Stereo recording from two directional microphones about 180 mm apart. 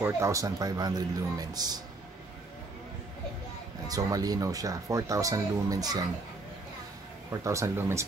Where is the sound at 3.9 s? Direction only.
20° right (ahead or behind).